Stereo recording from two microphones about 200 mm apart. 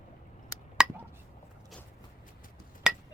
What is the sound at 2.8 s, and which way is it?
Hammer, 5° right (ahead or behind).